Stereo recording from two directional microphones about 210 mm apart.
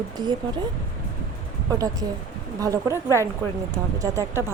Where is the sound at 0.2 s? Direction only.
20° right (ahead or behind).